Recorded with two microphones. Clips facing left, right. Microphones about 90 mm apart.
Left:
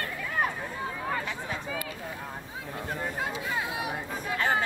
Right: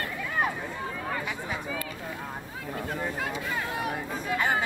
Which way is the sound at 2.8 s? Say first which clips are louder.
Right 1 dB; 15° left (ahead or behind).